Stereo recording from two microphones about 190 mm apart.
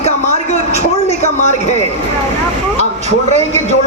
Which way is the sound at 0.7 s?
35° left (ahead or behind).